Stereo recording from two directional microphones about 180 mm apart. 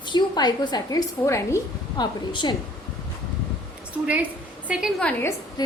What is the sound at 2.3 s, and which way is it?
Speech, 25° left (ahead or behind).